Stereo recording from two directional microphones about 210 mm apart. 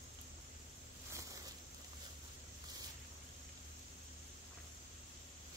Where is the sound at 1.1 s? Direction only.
15° right (ahead or behind).